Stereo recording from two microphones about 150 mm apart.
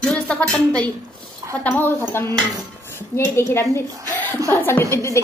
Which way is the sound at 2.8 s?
15° left (ahead or behind).